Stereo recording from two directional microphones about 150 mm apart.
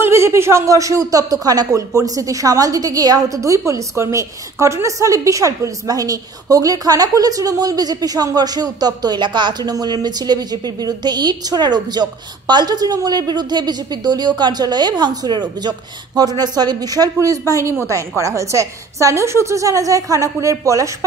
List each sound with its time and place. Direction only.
0.0 s speech: 15° right (ahead or behind)